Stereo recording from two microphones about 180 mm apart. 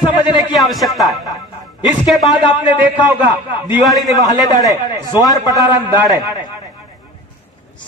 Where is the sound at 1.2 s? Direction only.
20° left (ahead or behind).